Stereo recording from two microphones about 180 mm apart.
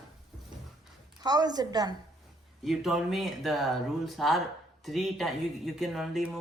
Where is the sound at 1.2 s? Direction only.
20° right (ahead or behind).